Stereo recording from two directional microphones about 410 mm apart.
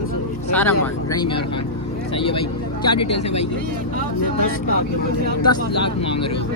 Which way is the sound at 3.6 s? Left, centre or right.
Right.